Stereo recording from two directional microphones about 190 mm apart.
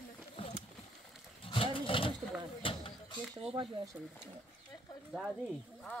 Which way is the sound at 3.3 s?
30° right (ahead or behind).